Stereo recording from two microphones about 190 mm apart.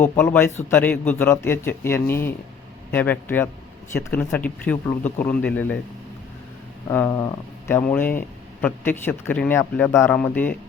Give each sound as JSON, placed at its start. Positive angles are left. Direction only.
{"t": 0.0, "sound": "a man's voice", "side_deg": 10}
{"t": 6.9, "sound": "a man's voice", "side_deg": 15}